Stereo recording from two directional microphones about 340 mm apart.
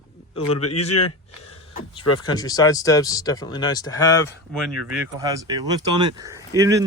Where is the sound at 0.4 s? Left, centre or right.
Left.